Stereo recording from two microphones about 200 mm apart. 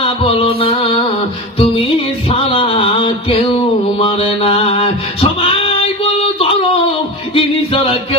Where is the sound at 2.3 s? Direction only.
25° left (ahead or behind).